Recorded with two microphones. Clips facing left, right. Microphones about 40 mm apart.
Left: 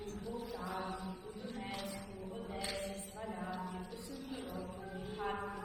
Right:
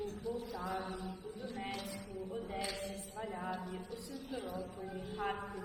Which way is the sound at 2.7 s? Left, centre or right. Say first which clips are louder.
Left 1 dB; left.